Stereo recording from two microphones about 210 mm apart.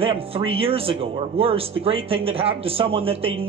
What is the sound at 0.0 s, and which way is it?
A man's voice, 25° right (ahead or behind).